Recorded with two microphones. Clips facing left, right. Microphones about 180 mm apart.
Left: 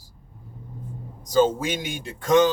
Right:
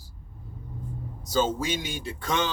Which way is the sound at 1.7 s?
50° left (ahead or behind).